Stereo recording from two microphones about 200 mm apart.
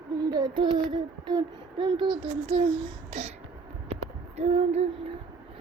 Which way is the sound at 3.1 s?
30° right (ahead or behind).